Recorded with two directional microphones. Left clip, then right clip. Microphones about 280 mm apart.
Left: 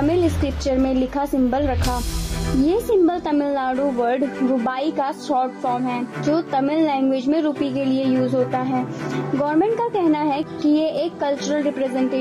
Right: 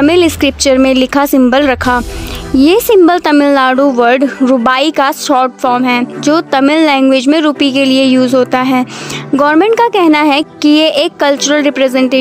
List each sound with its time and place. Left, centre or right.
0.0 s speech: right